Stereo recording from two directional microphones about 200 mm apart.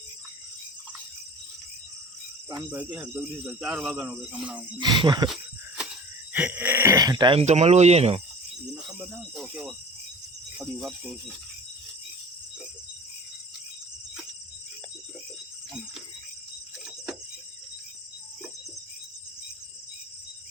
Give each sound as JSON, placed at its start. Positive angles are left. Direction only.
{"t": 2.6, "sound": "speech", "side_deg": -5}
{"t": 4.8, "sound": "speech", "side_deg": -20}
{"t": 5.3, "sound": "a sound", "side_deg": -5}
{"t": 6.3, "sound": "speech", "side_deg": -5}
{"t": 8.6, "sound": "speech", "side_deg": -5}